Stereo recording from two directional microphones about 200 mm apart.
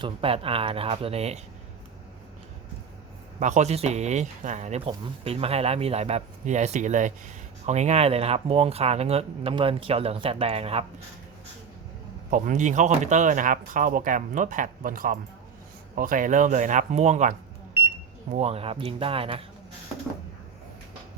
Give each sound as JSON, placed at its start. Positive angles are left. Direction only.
{"t": 0.0, "sound": "speech", "side_deg": -30}
{"t": 3.4, "sound": "speech", "side_deg": -35}
{"t": 12.3, "sound": "speech", "side_deg": -40}